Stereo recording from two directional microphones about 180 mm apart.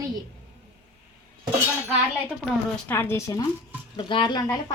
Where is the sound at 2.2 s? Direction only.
10° left (ahead or behind).